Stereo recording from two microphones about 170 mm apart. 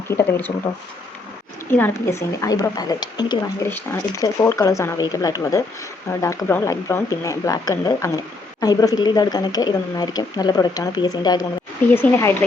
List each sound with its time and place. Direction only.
0.1 s speech: 15° left (ahead or behind)
1.7 s speech: 15° left (ahead or behind)